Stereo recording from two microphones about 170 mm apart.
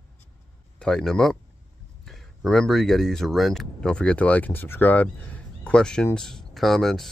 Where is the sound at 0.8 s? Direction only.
5° left (ahead or behind).